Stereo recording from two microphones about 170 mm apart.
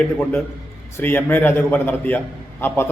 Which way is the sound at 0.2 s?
10° left (ahead or behind).